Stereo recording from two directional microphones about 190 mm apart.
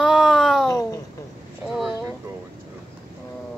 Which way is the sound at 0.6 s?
15° left (ahead or behind).